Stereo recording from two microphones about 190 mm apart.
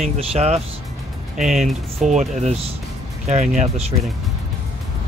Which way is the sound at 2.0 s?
35° right (ahead or behind).